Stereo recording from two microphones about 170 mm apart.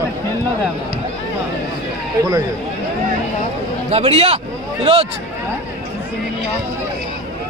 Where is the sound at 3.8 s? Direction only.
35° right (ahead or behind).